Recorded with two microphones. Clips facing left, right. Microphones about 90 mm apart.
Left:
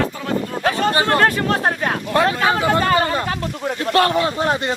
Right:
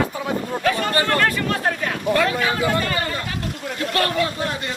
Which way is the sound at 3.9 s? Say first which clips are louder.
Left 6 dB; 30° left (ahead or behind).